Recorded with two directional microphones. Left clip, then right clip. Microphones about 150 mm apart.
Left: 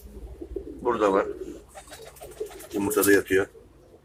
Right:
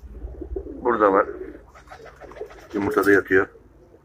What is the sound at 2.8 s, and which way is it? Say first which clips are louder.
Speech: right 3 dB; 5° right (ahead or behind).